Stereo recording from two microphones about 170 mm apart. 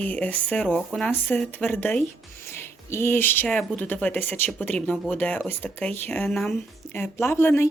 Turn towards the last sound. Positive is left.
turn(degrees=15)  # may be behind; listen again after turning